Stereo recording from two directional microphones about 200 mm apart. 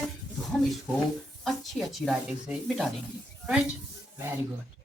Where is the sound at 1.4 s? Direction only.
Centre (ahead or behind).